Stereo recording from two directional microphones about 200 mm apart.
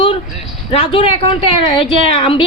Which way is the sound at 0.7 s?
25° left (ahead or behind).